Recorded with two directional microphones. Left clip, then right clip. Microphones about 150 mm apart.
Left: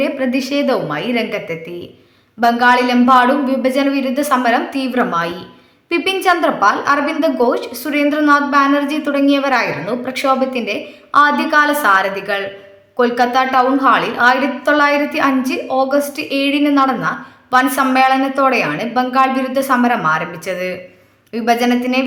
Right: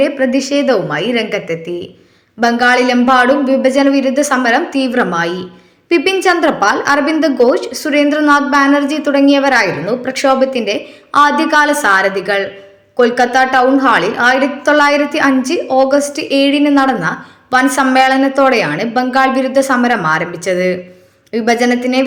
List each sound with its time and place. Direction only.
0.0 s a woman's voice: 20° right (ahead or behind)